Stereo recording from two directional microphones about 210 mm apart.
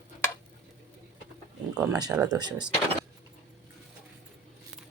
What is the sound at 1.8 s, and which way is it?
Speech, 15° right (ahead or behind).